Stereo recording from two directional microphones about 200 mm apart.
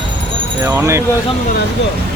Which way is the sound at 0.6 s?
15° right (ahead or behind).